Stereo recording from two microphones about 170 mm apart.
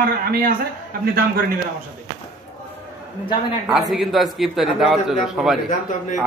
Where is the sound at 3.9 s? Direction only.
Centre (ahead or behind).